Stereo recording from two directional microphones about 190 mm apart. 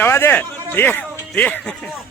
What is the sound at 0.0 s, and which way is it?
A man's voice, 10° left (ahead or behind).